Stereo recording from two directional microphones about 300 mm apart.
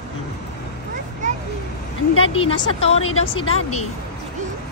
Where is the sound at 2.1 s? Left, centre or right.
Centre.